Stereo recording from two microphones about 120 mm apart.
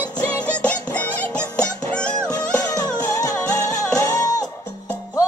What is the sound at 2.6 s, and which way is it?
Music, 30° left (ahead or behind).